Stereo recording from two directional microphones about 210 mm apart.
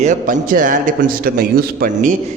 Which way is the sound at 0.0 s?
35° right (ahead or behind).